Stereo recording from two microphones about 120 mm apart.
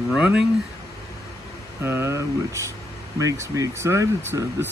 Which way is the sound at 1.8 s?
20° right (ahead or behind).